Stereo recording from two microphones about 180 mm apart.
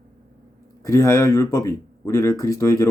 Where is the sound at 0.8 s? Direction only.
15° left (ahead or behind).